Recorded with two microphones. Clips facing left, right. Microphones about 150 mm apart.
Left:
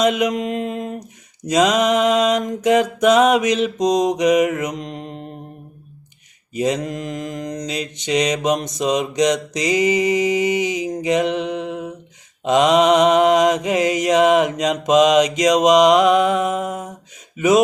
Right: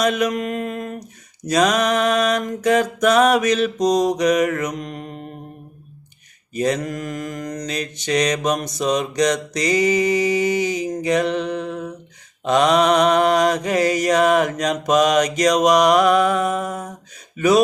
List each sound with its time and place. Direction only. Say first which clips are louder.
0.0 s mantra: left 2 dB; 20° left (ahead or behind)
6.6 s mantra: even; 15° left (ahead or behind)
17.3 s speech: left 1 dB; 20° left (ahead or behind)